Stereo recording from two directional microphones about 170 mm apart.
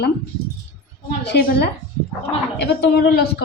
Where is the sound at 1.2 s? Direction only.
75° left (ahead or behind).